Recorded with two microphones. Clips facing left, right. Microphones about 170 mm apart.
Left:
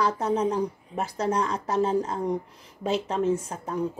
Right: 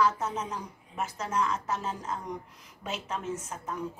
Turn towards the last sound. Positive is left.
turn(degrees=30)  # may be behind; listen again after turning